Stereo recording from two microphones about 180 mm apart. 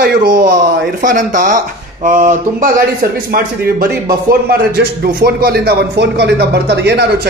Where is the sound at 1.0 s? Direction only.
45° right (ahead or behind).